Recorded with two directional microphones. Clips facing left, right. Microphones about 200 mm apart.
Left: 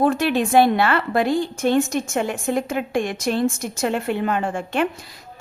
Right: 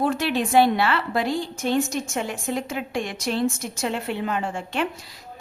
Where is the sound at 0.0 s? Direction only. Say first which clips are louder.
Left 4 dB; 50° left (ahead or behind).